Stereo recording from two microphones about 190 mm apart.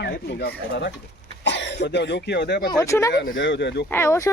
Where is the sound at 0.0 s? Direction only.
60° left (ahead or behind).